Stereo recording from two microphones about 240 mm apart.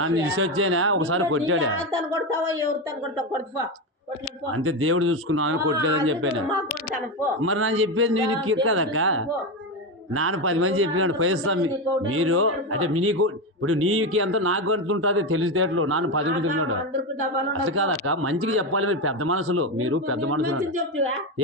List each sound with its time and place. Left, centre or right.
0.0 s speech: right
2.1 s a woman's voice: centre
4.5 s speech: right
7.4 s speech: right